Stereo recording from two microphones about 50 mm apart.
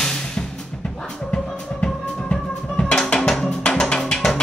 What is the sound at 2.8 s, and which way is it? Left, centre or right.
Music, centre.